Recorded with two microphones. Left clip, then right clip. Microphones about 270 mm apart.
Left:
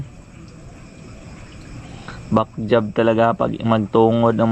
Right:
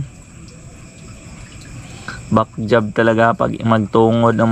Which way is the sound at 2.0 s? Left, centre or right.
Centre.